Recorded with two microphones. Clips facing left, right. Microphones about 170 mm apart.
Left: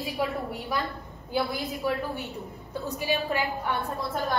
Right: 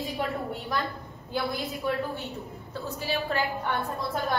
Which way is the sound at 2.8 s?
15° left (ahead or behind).